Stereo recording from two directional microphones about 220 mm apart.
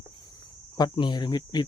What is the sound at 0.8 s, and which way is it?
Speech, 20° left (ahead or behind).